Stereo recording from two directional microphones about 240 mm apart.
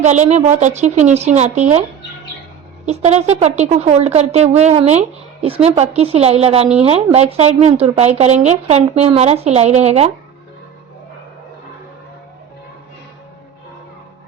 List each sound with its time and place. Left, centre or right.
0.0 s speech: right
2.8 s speech: right